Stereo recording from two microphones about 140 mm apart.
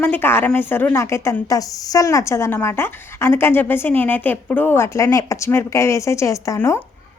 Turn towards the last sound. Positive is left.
turn(degrees=20)  # may be behind; listen again after turning